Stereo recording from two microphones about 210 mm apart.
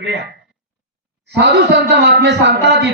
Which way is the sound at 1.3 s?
55° right (ahead or behind).